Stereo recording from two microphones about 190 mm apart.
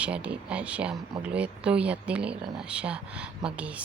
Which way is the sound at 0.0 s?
5° right (ahead or behind).